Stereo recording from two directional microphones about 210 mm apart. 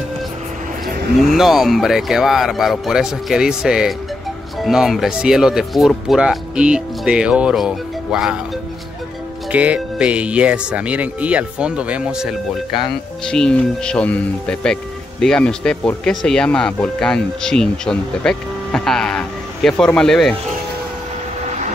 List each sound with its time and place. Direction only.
1.2 s speech: centre (ahead or behind)
9.5 s speech: 5° right (ahead or behind)
21.5 s vehicle: 35° right (ahead or behind)